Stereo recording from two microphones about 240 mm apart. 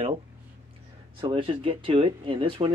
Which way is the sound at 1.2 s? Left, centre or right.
Right.